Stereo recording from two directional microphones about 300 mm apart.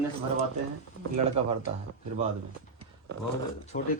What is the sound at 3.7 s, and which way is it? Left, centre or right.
Speech, left.